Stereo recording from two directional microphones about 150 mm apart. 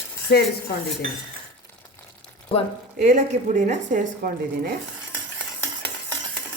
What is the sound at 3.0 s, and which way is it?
Speech, 55° right (ahead or behind).